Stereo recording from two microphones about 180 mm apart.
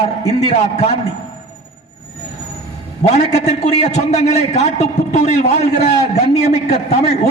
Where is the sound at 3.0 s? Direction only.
40° left (ahead or behind).